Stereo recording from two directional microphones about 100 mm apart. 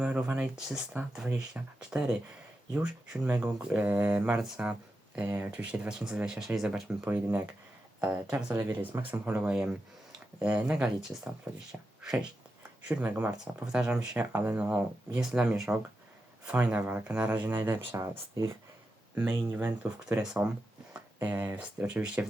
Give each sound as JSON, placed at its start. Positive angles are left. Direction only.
{"t": 0.0, "sound": "speech", "side_deg": -15}
{"t": 4.4, "sound": "speech", "side_deg": -5}
{"t": 19.1, "sound": "speech", "side_deg": -20}
{"t": 20.2, "sound": "speech", "side_deg": -5}
{"t": 21.2, "sound": "speech", "side_deg": -20}